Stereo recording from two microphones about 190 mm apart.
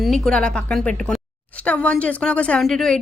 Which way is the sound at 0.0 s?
5° left (ahead or behind).